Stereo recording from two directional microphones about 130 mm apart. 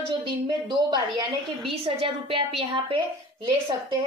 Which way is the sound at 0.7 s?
35° right (ahead or behind).